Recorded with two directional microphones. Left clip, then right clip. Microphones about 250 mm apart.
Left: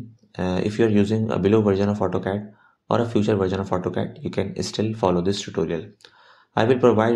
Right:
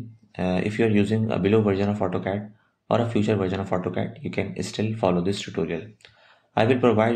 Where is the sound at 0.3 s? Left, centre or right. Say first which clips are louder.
Left 1 dB; centre.